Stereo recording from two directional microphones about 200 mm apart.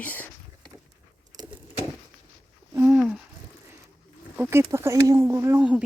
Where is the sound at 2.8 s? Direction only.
5° right (ahead or behind).